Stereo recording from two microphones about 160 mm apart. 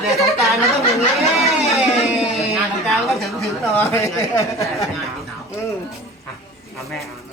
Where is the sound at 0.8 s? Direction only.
40° left (ahead or behind).